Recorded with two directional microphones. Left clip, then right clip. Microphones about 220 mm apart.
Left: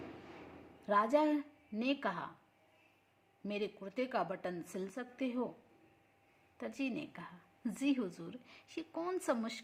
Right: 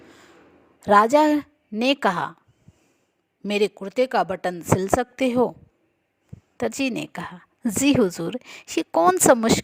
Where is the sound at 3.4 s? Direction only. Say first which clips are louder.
Right 18 dB; 50° right (ahead or behind).